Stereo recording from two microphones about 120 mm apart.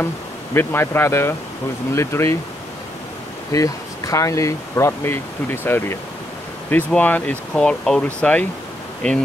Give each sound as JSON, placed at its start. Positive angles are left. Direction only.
{"t": 0.6, "sound": "speech", "side_deg": 20}
{"t": 3.5, "sound": "speech", "side_deg": 30}